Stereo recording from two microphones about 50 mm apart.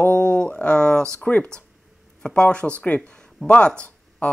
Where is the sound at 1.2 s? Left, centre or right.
Left.